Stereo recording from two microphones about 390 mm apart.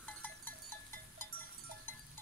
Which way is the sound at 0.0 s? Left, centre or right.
Centre.